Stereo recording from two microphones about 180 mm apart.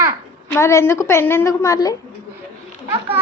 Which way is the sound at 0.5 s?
15° left (ahead or behind).